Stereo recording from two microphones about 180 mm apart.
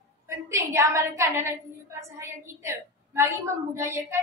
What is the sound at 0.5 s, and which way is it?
A woman's voice, 15° right (ahead or behind).